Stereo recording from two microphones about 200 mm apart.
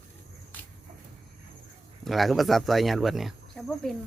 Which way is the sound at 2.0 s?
Centre (ahead or behind).